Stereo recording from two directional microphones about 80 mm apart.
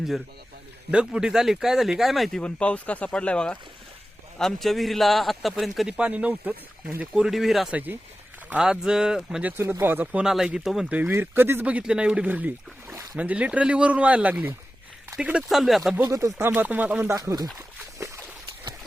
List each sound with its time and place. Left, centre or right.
0.9 s a man's voice: centre
2.4 s a man's voice: centre
6.0 s speech: centre
7.7 s speech: right
8.4 s speech: centre
9.4 s speech: right
10.2 s a man's voice: centre
11.1 s speech: right
11.6 s speech: centre
15.4 s a man's voice: centre
16.0 s speech: right
16.5 s speech: right
17.1 s speech: right
17.9 s a sound: right